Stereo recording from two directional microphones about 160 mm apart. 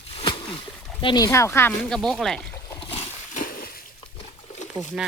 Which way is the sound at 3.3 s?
60° left (ahead or behind).